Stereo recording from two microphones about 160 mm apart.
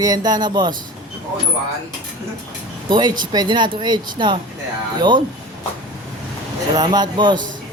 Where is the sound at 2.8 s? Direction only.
30° right (ahead or behind).